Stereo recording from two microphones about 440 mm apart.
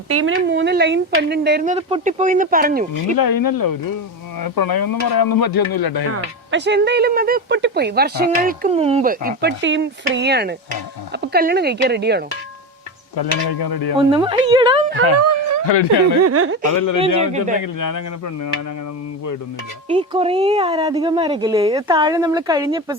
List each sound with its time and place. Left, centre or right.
0.1 s speech: right
3.2 s speech: left
6.5 s speech: right
13.1 s speech: left
13.9 s a woman's voice: centre
15.6 s speech: left
16.2 s speech: right
16.6 s speech: left
17.2 s a woman's voice: centre
17.6 s speech: left
19.9 s a woman's voice: centre